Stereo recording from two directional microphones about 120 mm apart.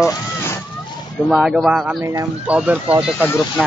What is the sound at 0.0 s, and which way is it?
Vehicle, 25° left (ahead or behind).